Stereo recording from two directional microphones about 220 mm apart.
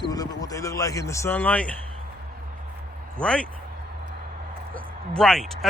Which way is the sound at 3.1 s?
5° left (ahead or behind).